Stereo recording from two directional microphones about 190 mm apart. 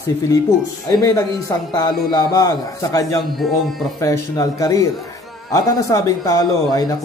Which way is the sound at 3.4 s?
Centre (ahead or behind).